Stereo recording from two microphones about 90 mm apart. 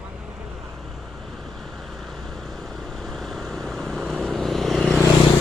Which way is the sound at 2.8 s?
5° left (ahead or behind).